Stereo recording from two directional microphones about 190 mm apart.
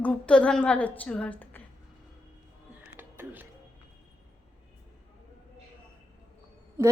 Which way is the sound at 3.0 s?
10° right (ahead or behind).